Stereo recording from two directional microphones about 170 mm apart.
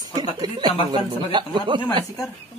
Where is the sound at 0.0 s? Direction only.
25° right (ahead or behind).